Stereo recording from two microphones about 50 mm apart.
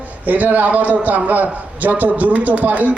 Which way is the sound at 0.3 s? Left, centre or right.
Right.